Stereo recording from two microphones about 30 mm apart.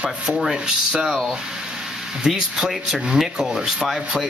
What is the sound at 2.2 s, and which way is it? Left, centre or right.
Speech, centre.